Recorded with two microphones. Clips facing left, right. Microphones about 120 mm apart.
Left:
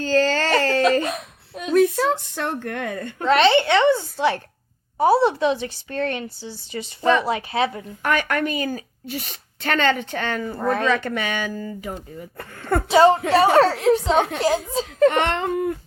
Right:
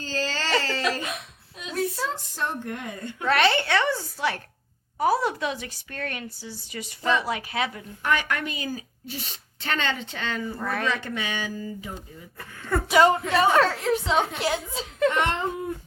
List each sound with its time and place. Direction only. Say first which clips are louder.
0.0 s a sound: left 10 dB; 60° left (ahead or behind)
1.0 s a woman's voice: left 7 dB; 45° left (ahead or behind)
3.2 s a woman's voice: left 6 dB; 25° left (ahead or behind)
8.0 s speech: left 4 dB; 50° left (ahead or behind)
10.6 s a child's voice: left 10 dB; 30° left (ahead or behind)
10.8 s speech: left 6 dB; 60° left (ahead or behind)
12.9 s a woman's voice: left 5 dB; 30° left (ahead or behind)
15.1 s speech: left 4 dB; 65° left (ahead or behind)